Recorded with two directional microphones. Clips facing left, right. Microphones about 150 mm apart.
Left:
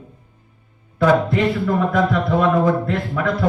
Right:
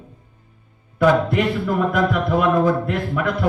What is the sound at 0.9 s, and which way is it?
A man's voice, 10° right (ahead or behind).